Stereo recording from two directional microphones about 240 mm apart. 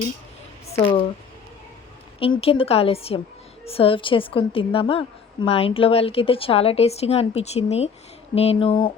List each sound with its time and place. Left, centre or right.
0.7 s speech: left
2.4 s a woman's voice: left